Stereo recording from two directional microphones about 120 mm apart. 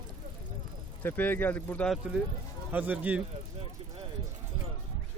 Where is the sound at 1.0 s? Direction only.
15° left (ahead or behind).